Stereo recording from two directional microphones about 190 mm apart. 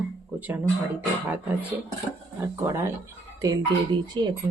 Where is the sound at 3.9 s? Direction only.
25° right (ahead or behind).